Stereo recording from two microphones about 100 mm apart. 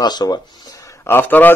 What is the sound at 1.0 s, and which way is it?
Speech, 20° left (ahead or behind).